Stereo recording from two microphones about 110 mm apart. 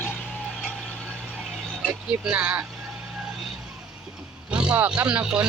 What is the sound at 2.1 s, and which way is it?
Speech, 15° right (ahead or behind).